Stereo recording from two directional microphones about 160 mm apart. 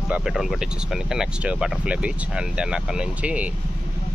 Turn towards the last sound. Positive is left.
turn(degrees=-10)  # may be behind; listen again after turning